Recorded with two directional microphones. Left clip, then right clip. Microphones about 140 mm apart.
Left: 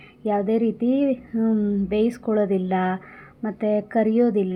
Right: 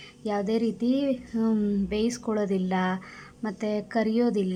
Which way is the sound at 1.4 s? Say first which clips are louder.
Left 3 dB; 10° left (ahead or behind).